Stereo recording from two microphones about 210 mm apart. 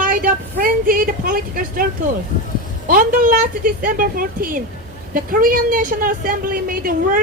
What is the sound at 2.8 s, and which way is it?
A woman's voice, 45° right (ahead or behind).